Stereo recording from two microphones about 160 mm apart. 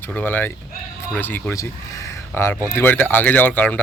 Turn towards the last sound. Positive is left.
turn(degrees=10)  # may be behind; listen again after turning